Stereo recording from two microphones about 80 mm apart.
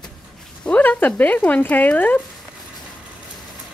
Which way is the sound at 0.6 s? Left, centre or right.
Left.